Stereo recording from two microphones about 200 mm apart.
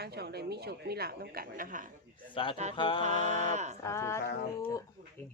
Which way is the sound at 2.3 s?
25° left (ahead or behind).